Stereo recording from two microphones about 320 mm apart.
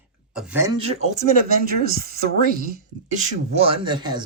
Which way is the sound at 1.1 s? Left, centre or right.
Right.